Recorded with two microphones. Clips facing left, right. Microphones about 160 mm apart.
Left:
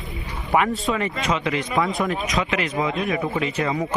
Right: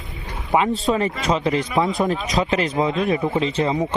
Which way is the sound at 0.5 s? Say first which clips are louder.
Right 1 dB; 20° right (ahead or behind).